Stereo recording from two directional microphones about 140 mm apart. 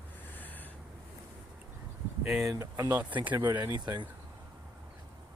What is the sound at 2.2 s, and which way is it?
Speech, centre (ahead or behind).